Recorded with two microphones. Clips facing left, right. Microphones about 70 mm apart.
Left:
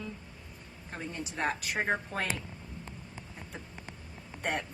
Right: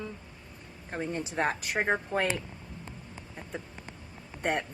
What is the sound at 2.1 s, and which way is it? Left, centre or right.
Speech, right.